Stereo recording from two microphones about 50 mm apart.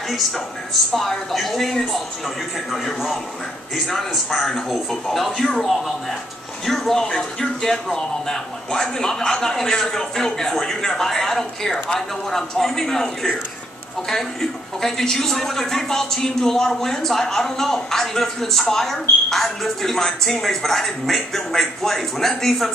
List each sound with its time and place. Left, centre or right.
0.9 s a man's voice: centre